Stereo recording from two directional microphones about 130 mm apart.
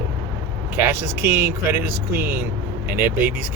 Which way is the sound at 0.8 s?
15° right (ahead or behind).